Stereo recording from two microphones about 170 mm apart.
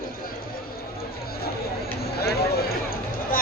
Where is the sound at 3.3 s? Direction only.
55° left (ahead or behind).